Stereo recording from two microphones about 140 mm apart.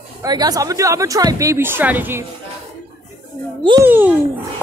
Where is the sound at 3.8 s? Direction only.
15° right (ahead or behind).